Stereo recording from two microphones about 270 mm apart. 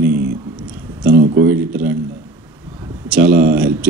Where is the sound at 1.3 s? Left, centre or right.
Right.